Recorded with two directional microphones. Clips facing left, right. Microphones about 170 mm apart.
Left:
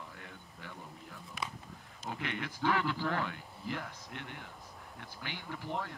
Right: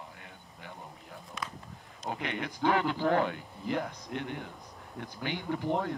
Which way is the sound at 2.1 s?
20° right (ahead or behind).